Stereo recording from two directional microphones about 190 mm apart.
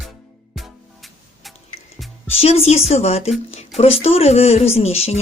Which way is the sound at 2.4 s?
35° left (ahead or behind).